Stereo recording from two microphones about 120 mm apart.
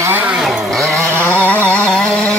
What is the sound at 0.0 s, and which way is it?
Vehicle, 15° right (ahead or behind).